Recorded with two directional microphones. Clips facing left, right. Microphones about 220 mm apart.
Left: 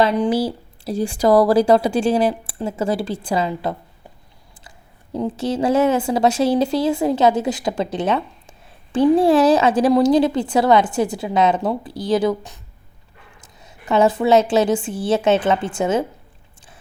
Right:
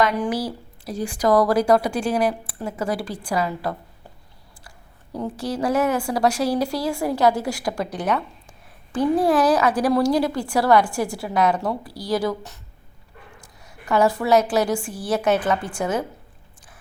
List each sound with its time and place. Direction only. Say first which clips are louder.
0.0 s a woman's voice: left 4 dB; 30° left (ahead or behind)
5.1 s a woman's voice: left 5 dB; 25° left (ahead or behind)
13.6 s a woman's voice: left 3 dB; 25° left (ahead or behind)